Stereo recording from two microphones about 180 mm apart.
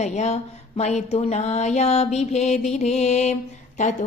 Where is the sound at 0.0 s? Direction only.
40° left (ahead or behind).